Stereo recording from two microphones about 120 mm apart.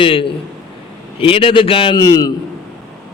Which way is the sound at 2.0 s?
30° left (ahead or behind).